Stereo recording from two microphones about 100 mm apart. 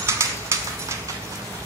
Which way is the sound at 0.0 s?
25° right (ahead or behind).